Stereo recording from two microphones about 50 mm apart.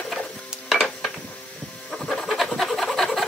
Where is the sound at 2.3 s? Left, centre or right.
Centre.